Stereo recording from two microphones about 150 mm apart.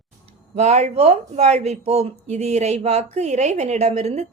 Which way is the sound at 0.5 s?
50° right (ahead or behind).